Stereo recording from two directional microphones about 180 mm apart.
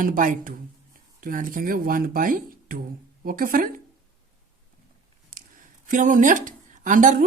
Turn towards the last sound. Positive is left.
turn(degrees=-45)  # may be behind; listen again after turning